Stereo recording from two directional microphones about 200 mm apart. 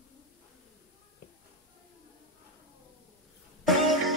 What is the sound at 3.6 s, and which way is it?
Music, centre (ahead or behind).